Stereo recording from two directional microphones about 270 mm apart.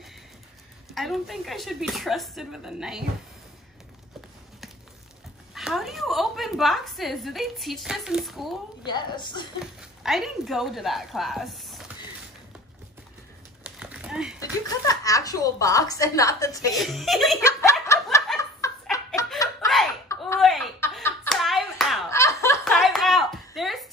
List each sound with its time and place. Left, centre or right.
0.9 s speech: centre
5.5 s a woman's voice: centre
8.8 s a woman's voice: centre
9.6 s speech: centre
13.7 s a sound: centre
14.4 s a woman's voice: centre
16.7 s speech: centre
17.5 s snicker: centre
20.3 s a sound: centre
22.1 s a sound: centre